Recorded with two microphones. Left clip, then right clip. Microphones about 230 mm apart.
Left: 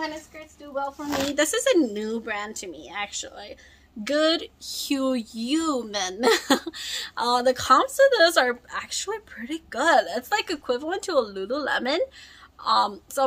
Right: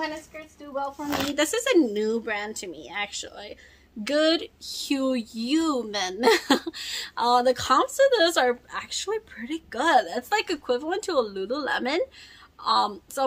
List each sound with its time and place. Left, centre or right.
0.7 s speech: centre
1.0 s speech: centre
1.3 s speech: centre